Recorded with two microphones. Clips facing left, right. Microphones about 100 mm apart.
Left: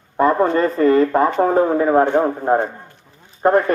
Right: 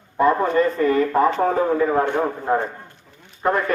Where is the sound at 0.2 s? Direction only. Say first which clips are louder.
Left 2 dB; 35° left (ahead or behind).